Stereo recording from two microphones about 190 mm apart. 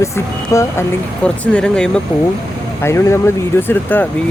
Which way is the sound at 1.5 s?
5° left (ahead or behind).